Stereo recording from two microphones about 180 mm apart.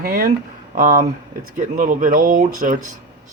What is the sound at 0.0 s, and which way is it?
Speech, 50° right (ahead or behind).